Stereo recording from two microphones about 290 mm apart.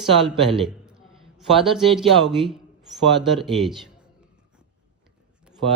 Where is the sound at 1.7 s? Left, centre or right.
Centre.